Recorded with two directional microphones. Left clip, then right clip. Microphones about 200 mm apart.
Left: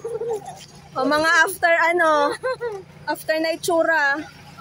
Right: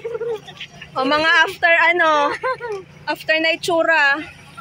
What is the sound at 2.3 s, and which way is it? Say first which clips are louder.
Speech: right 3 dB; 20° left (ahead or behind).